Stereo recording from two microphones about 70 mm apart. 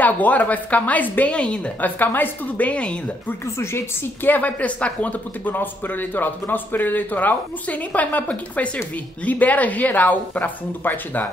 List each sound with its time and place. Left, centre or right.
0.0 s speech: left
3.5 s speech: left
4.3 s speech: left